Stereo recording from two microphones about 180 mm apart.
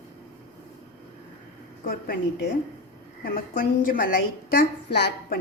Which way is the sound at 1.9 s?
55° left (ahead or behind).